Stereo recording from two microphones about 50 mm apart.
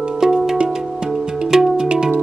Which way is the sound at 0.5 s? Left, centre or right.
Right.